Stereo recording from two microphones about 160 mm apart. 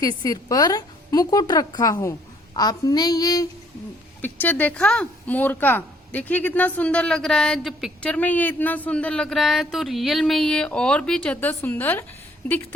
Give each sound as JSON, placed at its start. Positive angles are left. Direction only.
{"t": 0.0, "sound": "a woman's voice", "side_deg": 25}
{"t": 4.2, "sound": "speech", "side_deg": 10}